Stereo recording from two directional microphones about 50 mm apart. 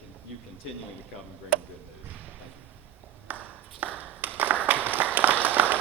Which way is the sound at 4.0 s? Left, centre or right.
Right.